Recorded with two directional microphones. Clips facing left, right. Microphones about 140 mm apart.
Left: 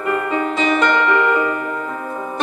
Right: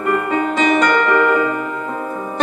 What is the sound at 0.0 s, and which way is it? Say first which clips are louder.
Music: right 2 dB; 45° right (ahead or behind).